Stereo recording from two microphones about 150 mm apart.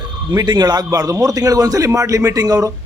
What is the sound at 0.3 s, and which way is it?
A man's voice, 25° right (ahead or behind).